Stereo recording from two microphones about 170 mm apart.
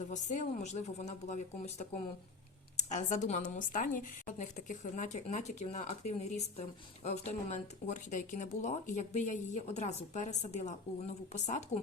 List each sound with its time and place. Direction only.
0.1 s a woman's voice: 45° left (ahead or behind)